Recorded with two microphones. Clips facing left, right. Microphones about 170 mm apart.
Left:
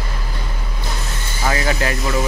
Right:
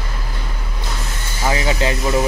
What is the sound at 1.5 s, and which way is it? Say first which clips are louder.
Speech: right 1 dB; 20° right (ahead or behind).